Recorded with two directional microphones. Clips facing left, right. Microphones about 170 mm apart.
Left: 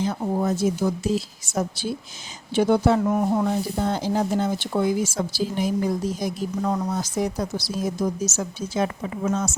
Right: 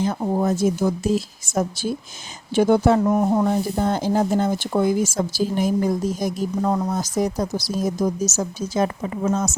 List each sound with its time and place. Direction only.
0.0 s speech: 50° right (ahead or behind)